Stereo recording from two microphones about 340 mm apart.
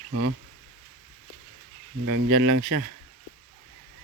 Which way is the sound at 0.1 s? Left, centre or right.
Right.